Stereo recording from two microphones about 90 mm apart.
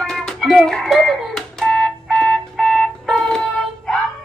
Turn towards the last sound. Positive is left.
turn(degrees=5)  # may be behind; listen again after turning